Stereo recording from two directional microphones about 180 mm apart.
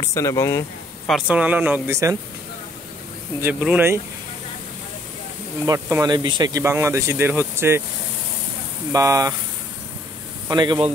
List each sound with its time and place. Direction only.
0.0 s speech: 15° left (ahead or behind)
1.0 s speech: 5° right (ahead or behind)
3.3 s speech: 10° right (ahead or behind)
5.7 s speech: 15° right (ahead or behind)
8.9 s speech: 20° right (ahead or behind)
10.5 s speech: 25° right (ahead or behind)